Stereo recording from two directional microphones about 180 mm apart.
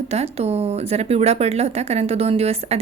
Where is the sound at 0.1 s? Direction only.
35° right (ahead or behind).